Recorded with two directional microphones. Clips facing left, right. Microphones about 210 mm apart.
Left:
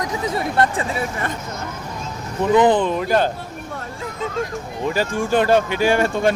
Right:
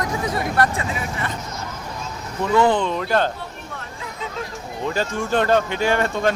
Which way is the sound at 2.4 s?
20° left (ahead or behind).